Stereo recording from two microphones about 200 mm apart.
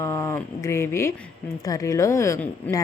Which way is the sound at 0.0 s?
15° left (ahead or behind).